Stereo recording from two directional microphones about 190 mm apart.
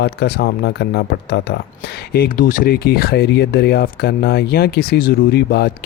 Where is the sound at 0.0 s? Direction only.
60° left (ahead or behind).